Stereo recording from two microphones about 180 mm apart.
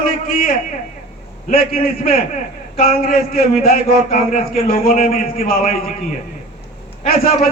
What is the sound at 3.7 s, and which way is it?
Speech, 40° left (ahead or behind).